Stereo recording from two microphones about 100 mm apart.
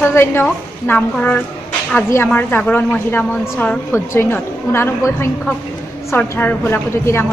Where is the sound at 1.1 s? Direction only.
15° left (ahead or behind).